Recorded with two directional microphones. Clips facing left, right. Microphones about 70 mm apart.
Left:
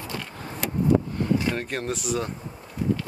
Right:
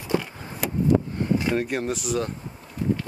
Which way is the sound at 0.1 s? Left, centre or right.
Right.